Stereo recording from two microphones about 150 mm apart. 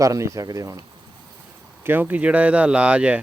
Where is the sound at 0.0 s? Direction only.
20° right (ahead or behind).